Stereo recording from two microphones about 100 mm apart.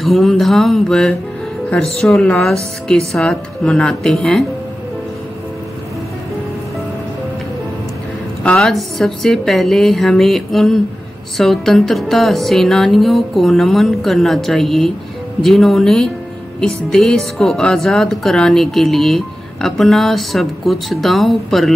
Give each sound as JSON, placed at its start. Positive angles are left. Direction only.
{"t": 0.0, "sound": "speech", "side_deg": 0}
{"t": 8.5, "sound": "speech", "side_deg": 5}